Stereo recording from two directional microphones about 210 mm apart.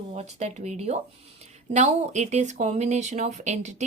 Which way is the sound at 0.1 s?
30° right (ahead or behind).